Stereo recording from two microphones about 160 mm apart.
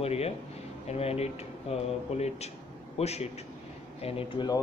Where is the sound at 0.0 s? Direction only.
40° left (ahead or behind).